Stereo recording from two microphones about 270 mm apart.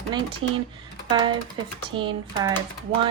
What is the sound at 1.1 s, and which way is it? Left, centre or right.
Speech, centre.